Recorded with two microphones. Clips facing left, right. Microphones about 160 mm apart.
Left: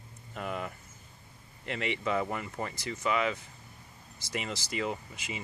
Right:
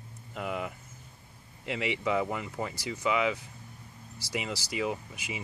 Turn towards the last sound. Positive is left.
turn(degrees=-15)  # may be behind; listen again after turning